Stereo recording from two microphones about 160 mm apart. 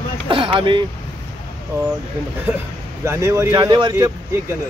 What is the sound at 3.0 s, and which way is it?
Speech, 20° right (ahead or behind).